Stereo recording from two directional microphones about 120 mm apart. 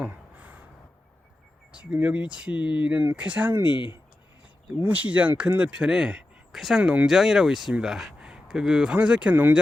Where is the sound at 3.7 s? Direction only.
40° left (ahead or behind).